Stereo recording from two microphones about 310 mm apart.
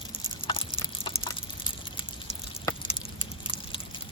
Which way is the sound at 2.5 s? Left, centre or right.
Centre.